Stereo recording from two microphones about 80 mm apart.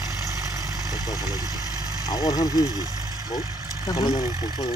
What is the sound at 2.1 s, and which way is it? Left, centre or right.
Speech, left.